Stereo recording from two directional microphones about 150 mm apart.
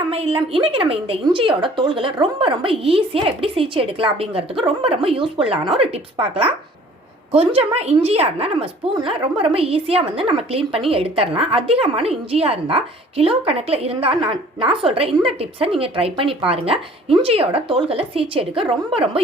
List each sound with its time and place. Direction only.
0.1 s a woman's voice: 40° right (ahead or behind)